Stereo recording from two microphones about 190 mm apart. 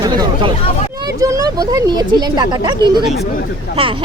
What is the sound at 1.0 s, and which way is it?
Speech, 20° right (ahead or behind).